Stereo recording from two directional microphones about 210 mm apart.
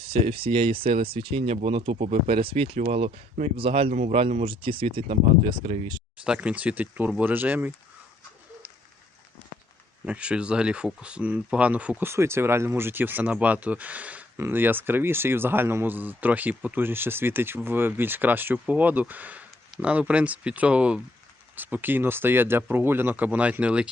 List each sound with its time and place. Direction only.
0.0 s speech: 25° right (ahead or behind)
6.2 s speech: 5° right (ahead or behind)
10.1 s speech: 5° right (ahead or behind)